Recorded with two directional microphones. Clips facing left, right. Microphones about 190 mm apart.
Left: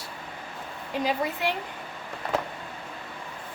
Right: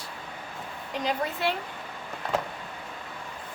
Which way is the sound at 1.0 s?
15° left (ahead or behind).